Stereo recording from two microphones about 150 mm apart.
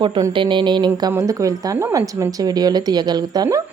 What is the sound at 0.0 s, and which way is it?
A woman's voice, 30° right (ahead or behind).